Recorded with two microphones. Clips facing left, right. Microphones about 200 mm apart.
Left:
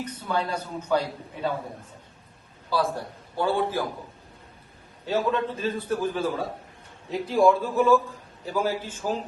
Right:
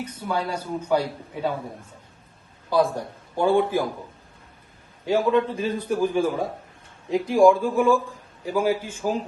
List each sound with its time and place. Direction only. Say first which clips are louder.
0.0 s a man's voice: right 1 dB; 10° right (ahead or behind)
2.7 s a man's voice: right 5 dB; 15° right (ahead or behind)
5.0 s a man's voice: right 5 dB; 15° right (ahead or behind)